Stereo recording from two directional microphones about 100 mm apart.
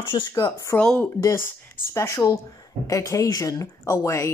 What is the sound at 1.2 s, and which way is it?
Speech, 25° left (ahead or behind).